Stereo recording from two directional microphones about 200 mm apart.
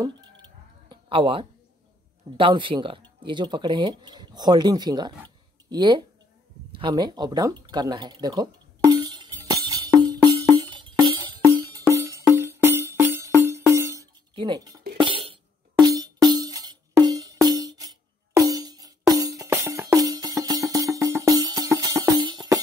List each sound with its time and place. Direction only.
0.8 s a sound: 25° right (ahead or behind)
2.3 s speech: 25° right (ahead or behind)
6.7 s a sound: 25° right (ahead or behind)
13.4 s music: 15° right (ahead or behind)
14.3 s speech: 25° right (ahead or behind)
15.0 s music: 25° right (ahead or behind)